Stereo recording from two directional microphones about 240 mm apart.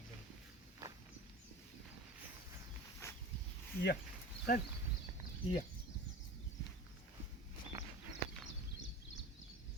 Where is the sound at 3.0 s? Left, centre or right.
Centre.